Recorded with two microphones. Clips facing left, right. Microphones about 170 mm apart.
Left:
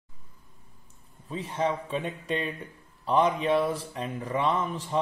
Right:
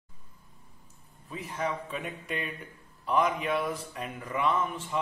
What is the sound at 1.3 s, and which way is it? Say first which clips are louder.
A man's voice: left 5 dB; 30° left (ahead or behind).